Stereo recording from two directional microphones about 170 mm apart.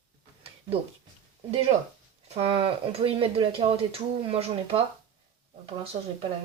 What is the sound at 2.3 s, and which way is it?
Speech, 35° right (ahead or behind).